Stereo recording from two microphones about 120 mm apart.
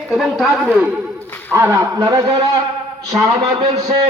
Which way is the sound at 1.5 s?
25° right (ahead or behind).